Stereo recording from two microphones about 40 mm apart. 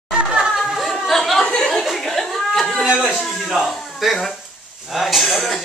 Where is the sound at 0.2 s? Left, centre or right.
Centre.